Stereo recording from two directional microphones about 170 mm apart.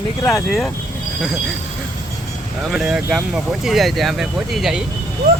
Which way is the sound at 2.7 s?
Centre (ahead or behind).